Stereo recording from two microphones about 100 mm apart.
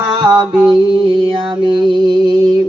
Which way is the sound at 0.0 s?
45° right (ahead or behind).